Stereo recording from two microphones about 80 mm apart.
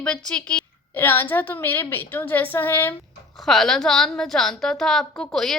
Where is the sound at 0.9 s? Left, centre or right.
Left.